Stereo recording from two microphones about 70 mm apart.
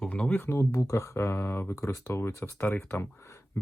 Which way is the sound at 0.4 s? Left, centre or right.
Left.